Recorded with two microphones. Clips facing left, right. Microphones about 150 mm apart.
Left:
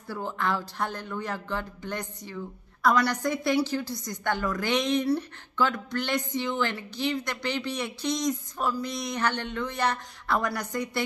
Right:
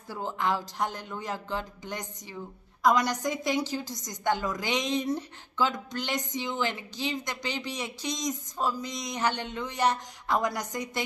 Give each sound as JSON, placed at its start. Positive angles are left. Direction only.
{"t": 0.1, "sound": "speech", "side_deg": -15}